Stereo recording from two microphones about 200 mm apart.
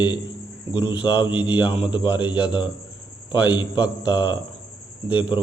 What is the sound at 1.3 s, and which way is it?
Speech, 5° right (ahead or behind).